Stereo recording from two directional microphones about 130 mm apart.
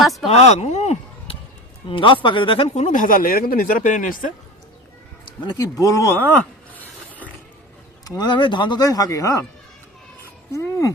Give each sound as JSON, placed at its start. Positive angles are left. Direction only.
{"t": 0.0, "sound": "speech", "side_deg": 0}
{"t": 0.3, "sound": "speech", "side_deg": 55}
{"t": 1.9, "sound": "speech", "side_deg": 40}
{"t": 2.7, "sound": "speech", "side_deg": 70}
{"t": 5.4, "sound": "speech", "side_deg": 30}
{"t": 6.2, "sound": "a sound", "side_deg": 10}
{"t": 8.0, "sound": "speech", "side_deg": 30}
{"t": 10.5, "sound": "speech", "side_deg": 25}